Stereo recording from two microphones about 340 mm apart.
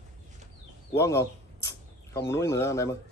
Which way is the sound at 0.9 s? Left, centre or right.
Centre.